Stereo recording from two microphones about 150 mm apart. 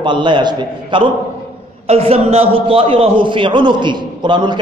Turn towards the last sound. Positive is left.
turn(degrees=-30)  # may be behind; listen again after turning